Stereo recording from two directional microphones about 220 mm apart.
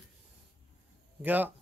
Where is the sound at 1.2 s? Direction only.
10° right (ahead or behind).